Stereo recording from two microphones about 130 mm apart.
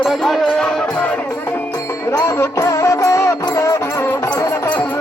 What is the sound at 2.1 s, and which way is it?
Music, 20° left (ahead or behind).